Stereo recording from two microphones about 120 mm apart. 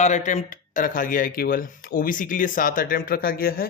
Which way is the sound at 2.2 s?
90° left.